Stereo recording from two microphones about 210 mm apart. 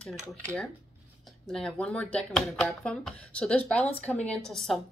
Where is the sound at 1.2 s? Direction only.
5° left (ahead or behind).